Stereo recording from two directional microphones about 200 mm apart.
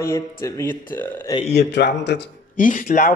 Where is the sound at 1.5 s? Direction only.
60° left (ahead or behind).